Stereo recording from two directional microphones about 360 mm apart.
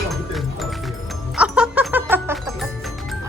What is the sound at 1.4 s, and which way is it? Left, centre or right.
Music, centre.